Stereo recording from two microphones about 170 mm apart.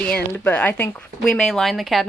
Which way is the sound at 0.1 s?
10° left (ahead or behind).